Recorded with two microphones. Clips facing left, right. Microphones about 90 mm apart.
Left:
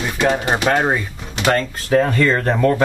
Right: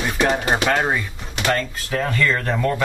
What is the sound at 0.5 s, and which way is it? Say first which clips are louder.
Speech: left 2 dB; 15° left (ahead or behind).